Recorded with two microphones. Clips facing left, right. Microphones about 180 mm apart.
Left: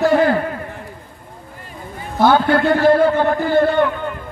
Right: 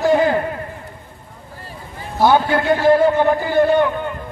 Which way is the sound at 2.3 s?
20° right (ahead or behind).